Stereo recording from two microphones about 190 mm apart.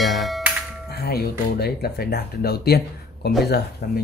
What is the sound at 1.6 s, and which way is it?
Speech, 55° left (ahead or behind).